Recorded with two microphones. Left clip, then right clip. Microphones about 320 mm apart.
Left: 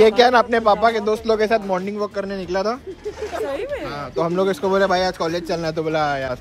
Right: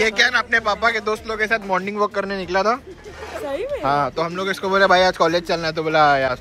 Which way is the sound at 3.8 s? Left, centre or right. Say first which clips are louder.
Right 4 dB; centre.